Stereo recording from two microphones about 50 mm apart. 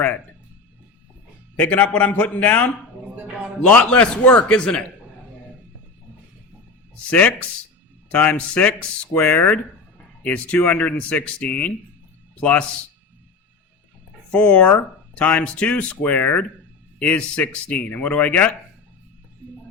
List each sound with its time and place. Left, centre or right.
1.5 s speech: left
3.7 s speech: left
4.2 s speech: left
4.4 s speech: centre
7.1 s speech: left
14.3 s speech: left
17.0 s speech: left
19.4 s music: right